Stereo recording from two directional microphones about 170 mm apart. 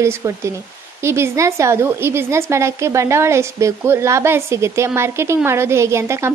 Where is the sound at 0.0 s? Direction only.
15° right (ahead or behind).